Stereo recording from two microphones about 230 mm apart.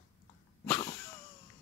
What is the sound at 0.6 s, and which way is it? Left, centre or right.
Wheeze, centre.